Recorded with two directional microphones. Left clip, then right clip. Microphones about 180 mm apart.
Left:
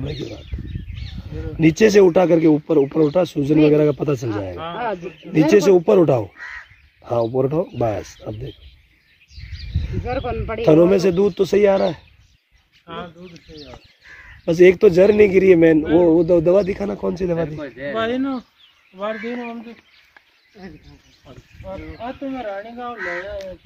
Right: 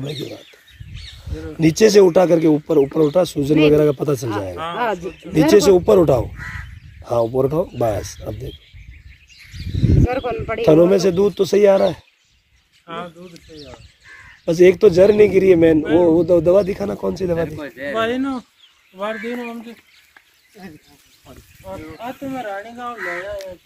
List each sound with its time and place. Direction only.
0.0 s speech: centre (ahead or behind)
4.7 s a man's voice: 65° right (ahead or behind)
5.5 s speech: centre (ahead or behind)
10.0 s speech: 65° right (ahead or behind)
10.6 s speech: centre (ahead or behind)
12.8 s speech: 15° left (ahead or behind)
14.4 s speech: centre (ahead or behind)
17.4 s speech: 35° right (ahead or behind)
17.9 s speech: centre (ahead or behind)
18.9 s speech: 15° right (ahead or behind)
22.0 s speech: 5° left (ahead or behind)
22.9 s speech: 30° left (ahead or behind)